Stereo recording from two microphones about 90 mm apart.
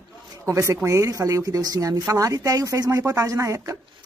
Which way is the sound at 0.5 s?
35° right (ahead or behind).